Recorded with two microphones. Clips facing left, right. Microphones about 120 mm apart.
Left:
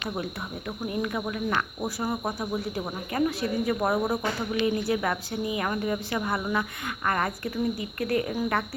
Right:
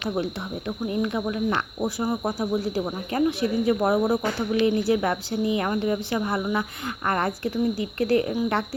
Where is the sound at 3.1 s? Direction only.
30° right (ahead or behind).